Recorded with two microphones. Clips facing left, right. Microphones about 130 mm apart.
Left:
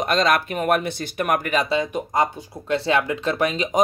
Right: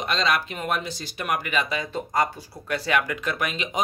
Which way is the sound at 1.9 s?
20° left (ahead or behind).